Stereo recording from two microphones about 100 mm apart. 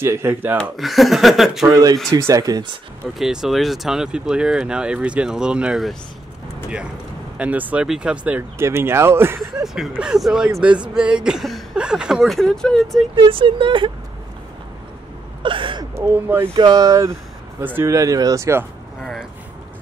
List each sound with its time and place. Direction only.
0.0 s speech: 25° right (ahead or behind)
0.6 s speech: centre (ahead or behind)
1.7 s speech: 40° right (ahead or behind)
3.2 s speech: 5° right (ahead or behind)
7.3 s speech: 15° right (ahead or behind)
8.5 s speech: 25° right (ahead or behind)
9.6 s speech: 5° right (ahead or behind)
13.1 s speech: 60° right (ahead or behind)
15.4 s a sound: 60° right (ahead or behind)
16.1 s speech: 20° right (ahead or behind)
16.5 s speech: 45° right (ahead or behind)
17.6 s speech: 20° right (ahead or behind)
17.9 s speech: 35° right (ahead or behind)